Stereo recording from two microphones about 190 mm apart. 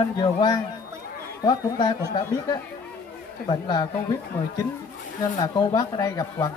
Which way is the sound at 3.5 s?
25° left (ahead or behind).